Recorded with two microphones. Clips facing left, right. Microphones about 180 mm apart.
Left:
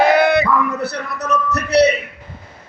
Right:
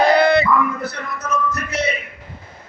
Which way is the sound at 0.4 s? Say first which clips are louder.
Left 1 dB; 70° left (ahead or behind).